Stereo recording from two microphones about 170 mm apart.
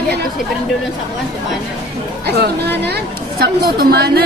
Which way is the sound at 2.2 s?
70° right (ahead or behind).